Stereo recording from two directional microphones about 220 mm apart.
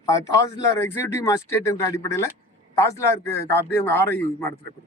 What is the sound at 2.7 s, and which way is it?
A man's voice, 15° left (ahead or behind).